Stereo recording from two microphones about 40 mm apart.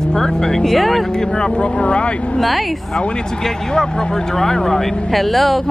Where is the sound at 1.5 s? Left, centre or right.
Left.